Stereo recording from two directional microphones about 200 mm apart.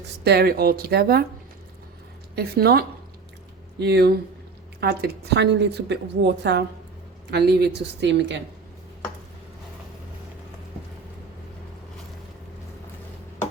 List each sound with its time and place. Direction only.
0.3 s speech: 50° right (ahead or behind)
2.3 s a woman's voice: 50° right (ahead or behind)